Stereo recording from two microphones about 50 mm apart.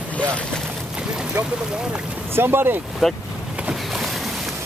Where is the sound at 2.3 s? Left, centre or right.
Right.